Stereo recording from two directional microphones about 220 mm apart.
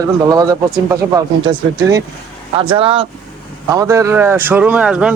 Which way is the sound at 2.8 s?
25° right (ahead or behind).